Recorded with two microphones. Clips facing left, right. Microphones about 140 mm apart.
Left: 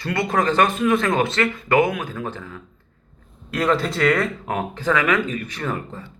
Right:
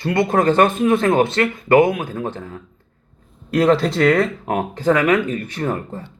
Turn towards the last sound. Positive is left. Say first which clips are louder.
# right 4 dB
turn(degrees=-30)  # may be behind; listen again after turning